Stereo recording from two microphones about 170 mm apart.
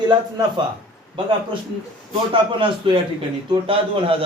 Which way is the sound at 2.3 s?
30° right (ahead or behind).